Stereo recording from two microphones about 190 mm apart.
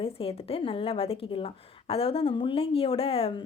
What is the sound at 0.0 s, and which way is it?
A woman's voice, 30° left (ahead or behind).